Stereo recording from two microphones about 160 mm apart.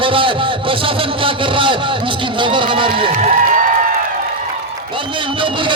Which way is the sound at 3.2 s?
45° right (ahead or behind).